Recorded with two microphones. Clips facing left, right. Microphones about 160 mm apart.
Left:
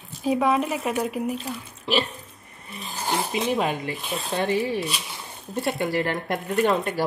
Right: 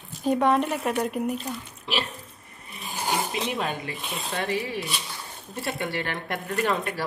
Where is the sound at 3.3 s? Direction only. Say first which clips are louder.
Left 5 dB; centre (ahead or behind).